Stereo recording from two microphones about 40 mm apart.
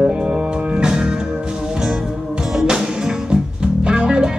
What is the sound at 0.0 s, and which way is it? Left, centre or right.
Music, right.